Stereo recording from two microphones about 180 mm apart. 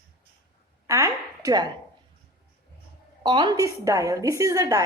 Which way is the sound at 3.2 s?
25° right (ahead or behind).